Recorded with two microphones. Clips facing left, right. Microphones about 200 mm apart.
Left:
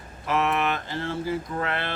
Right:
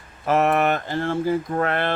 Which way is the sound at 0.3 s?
45° right (ahead or behind).